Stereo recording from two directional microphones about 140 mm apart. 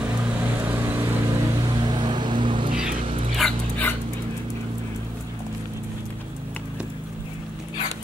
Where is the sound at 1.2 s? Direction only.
30° right (ahead or behind).